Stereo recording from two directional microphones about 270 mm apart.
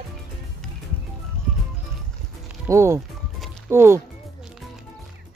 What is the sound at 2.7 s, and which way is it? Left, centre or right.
Music, centre.